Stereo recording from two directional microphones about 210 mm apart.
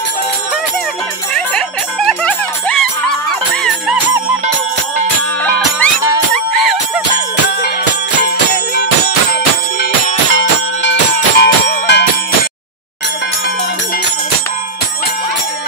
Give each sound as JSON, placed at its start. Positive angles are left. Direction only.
{"t": 1.3, "sound": "music", "side_deg": 5}
{"t": 6.3, "sound": "music", "side_deg": 0}
{"t": 11.1, "sound": "a sound", "side_deg": 50}